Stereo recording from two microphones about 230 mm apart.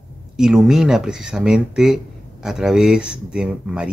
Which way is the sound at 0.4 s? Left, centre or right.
Centre.